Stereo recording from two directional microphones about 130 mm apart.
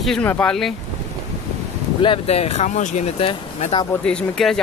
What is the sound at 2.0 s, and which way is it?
Speech, 45° left (ahead or behind).